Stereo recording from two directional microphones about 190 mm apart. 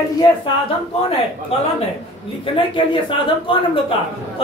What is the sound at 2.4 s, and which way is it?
Speech, 25° left (ahead or behind).